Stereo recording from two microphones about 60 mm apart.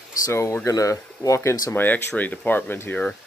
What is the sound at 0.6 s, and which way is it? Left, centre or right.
Speech, left.